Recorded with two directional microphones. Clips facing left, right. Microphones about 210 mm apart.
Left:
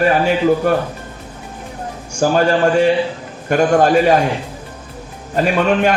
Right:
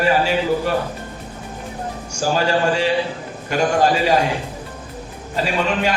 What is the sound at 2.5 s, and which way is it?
A man's voice, 50° left (ahead or behind).